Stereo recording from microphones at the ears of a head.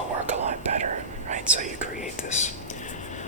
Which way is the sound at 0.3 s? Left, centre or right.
Right.